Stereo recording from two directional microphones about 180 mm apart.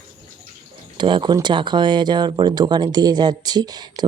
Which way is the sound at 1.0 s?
25° right (ahead or behind).